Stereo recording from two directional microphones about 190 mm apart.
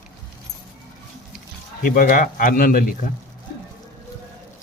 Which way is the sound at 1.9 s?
45° left (ahead or behind).